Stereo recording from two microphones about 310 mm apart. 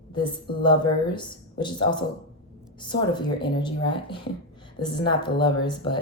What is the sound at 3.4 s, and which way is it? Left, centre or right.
Speech, centre.